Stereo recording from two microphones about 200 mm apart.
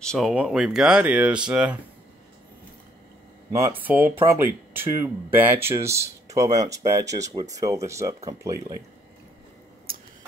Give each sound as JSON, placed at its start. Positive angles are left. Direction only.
{"t": 0.0, "sound": "speech", "side_deg": 0}
{"t": 3.5, "sound": "speech", "side_deg": -10}